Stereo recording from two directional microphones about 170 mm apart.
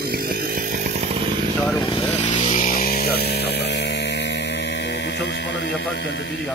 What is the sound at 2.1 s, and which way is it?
Music, 45° left (ahead or behind).